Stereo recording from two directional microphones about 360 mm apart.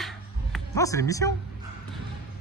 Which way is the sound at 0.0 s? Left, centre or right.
Centre.